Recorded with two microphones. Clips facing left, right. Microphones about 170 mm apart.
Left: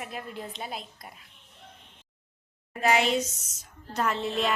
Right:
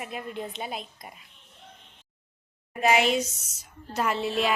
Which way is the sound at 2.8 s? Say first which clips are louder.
Right 2 dB; 15° right (ahead or behind).